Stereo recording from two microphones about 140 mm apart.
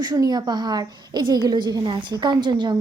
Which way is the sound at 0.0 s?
30° right (ahead or behind).